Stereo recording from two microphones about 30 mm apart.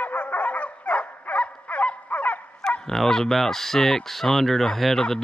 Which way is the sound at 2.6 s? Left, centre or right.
Left.